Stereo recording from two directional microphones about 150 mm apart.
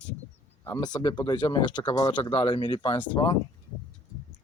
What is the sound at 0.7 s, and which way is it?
Speech, 25° left (ahead or behind).